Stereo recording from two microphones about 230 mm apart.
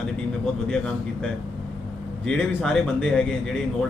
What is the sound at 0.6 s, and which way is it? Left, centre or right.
Speech, centre.